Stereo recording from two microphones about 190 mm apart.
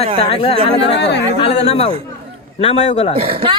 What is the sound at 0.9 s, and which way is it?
Speech, 65° left (ahead or behind).